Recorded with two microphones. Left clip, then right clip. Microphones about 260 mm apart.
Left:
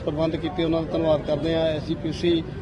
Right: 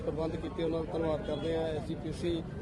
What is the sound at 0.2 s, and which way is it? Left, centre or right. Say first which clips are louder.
A man's voice: left 10 dB; left.